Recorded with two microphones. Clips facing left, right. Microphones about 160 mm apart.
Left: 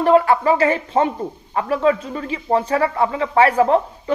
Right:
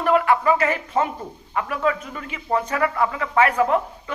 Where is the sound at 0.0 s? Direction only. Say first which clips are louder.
Left 4 dB; 30° left (ahead or behind).